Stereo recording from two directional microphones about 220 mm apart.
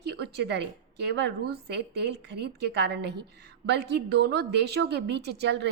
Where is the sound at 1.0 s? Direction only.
50° right (ahead or behind).